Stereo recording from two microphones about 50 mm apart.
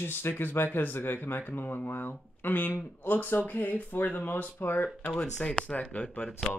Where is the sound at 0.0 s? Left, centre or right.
Left.